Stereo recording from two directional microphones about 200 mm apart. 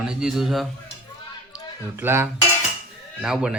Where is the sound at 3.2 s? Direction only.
5° right (ahead or behind).